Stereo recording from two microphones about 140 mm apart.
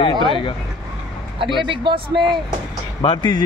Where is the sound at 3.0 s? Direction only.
35° left (ahead or behind).